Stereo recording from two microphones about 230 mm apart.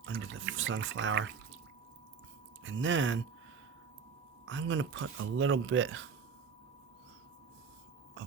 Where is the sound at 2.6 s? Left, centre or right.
Right.